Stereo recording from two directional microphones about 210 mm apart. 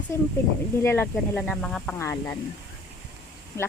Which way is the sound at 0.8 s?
10° left (ahead or behind).